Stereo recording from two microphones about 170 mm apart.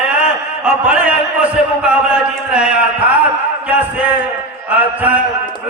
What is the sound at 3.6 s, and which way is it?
A man's voice, 10° right (ahead or behind).